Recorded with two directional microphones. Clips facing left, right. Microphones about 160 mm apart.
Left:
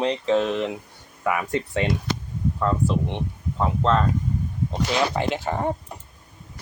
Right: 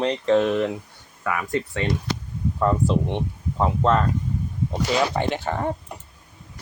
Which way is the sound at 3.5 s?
10° right (ahead or behind).